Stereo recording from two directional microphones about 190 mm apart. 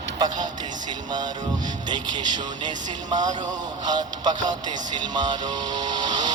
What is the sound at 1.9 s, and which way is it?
Speech, 20° right (ahead or behind).